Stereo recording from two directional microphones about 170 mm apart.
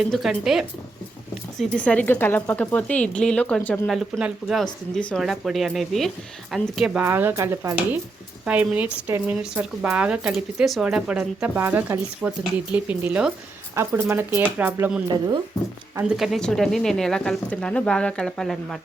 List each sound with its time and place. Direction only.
0.1 s a woman's voice: centre (ahead or behind)
15.0 s speech: 30° right (ahead or behind)
16.0 s speech: 5° right (ahead or behind)